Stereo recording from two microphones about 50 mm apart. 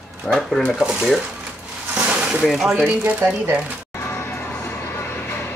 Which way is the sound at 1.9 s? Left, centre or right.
Centre.